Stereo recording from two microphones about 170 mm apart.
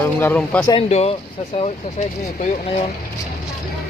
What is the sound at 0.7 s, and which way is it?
Speech, 35° left (ahead or behind).